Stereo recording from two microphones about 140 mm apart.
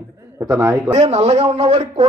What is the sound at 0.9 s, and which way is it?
A man's voice, 45° right (ahead or behind).